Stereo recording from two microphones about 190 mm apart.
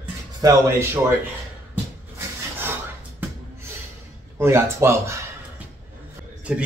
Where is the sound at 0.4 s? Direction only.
15° right (ahead or behind).